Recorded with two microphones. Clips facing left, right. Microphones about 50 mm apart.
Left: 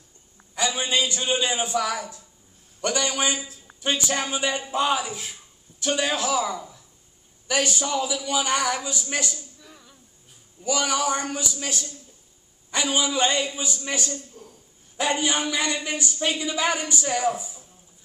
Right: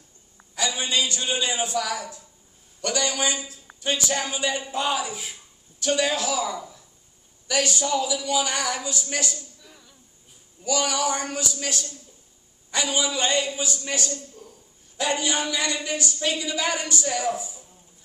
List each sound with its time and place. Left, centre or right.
0.6 s speech: left
5.1 s speech: centre
5.8 s speech: left
6.5 s speech: centre
7.4 s speech: left
9.1 s a sound: centre
10.6 s speech: left
14.4 s a sound: centre
15.0 s speech: left